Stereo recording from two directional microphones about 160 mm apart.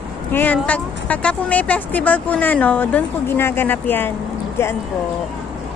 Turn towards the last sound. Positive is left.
turn(degrees=15)  # may be behind; listen again after turning